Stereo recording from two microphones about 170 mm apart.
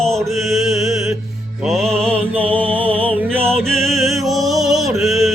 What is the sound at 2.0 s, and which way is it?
Music, 35° right (ahead or behind).